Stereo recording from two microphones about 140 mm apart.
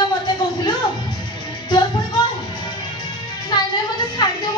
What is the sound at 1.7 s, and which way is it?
Music, 30° left (ahead or behind).